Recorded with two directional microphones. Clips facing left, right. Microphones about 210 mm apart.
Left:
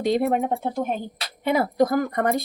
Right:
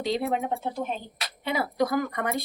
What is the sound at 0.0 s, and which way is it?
Speech, 50° left (ahead or behind).